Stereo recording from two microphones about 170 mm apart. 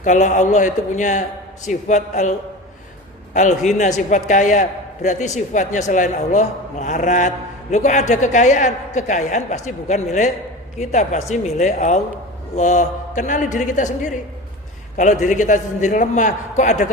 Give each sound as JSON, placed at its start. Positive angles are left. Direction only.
{"t": 0.0, "sound": "a man's voice", "side_deg": 45}
{"t": 3.3, "sound": "a man's voice", "side_deg": 45}